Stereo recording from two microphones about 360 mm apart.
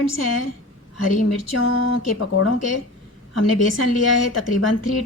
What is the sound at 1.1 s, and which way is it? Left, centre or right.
Speech, left.